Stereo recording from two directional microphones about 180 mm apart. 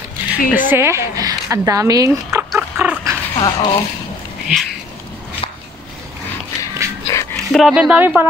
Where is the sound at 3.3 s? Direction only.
25° left (ahead or behind).